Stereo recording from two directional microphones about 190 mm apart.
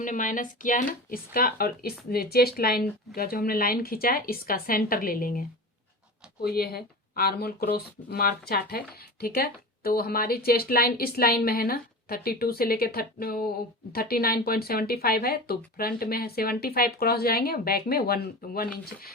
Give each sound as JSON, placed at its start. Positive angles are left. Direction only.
{"t": 0.0, "sound": "a woman's voice", "side_deg": 45}